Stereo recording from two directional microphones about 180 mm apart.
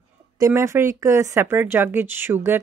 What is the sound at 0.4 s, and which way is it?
Speech, 15° right (ahead or behind).